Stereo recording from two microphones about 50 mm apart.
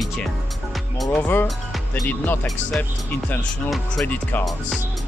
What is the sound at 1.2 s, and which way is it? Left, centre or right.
Speech, left.